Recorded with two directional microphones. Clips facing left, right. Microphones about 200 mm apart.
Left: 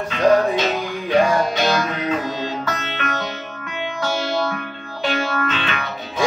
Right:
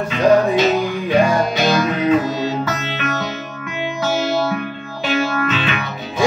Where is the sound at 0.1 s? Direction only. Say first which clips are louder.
Right 2 dB; 10° right (ahead or behind).